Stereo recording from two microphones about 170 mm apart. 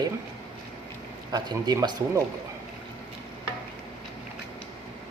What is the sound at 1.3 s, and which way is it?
Speech, 25° right (ahead or behind).